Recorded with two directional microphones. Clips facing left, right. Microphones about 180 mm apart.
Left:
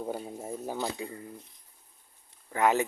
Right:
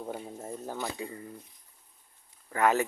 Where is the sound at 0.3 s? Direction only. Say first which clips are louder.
Left 2 dB; 10° left (ahead or behind).